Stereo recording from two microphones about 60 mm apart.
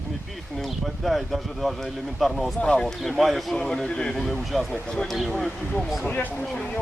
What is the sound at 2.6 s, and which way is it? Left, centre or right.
Speech, centre.